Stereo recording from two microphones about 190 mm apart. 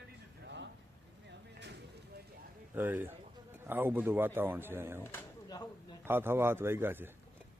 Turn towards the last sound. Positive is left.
turn(degrees=-10)  # may be behind; listen again after turning